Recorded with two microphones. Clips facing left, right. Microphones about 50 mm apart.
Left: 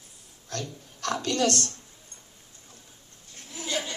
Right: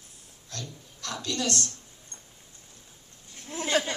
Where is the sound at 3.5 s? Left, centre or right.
Right.